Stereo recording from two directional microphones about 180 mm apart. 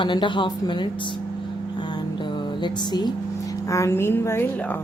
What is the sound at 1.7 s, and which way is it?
Music, 25° left (ahead or behind).